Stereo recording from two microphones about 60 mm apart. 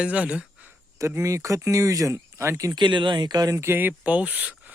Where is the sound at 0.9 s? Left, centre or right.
Right.